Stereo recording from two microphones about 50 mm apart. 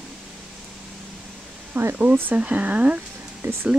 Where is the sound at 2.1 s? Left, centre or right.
Right.